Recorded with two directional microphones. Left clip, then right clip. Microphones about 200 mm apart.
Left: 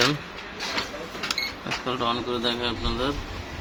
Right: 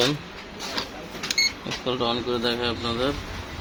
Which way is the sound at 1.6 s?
20° left (ahead or behind).